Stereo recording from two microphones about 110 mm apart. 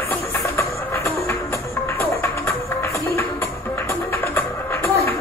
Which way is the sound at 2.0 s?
20° left (ahead or behind).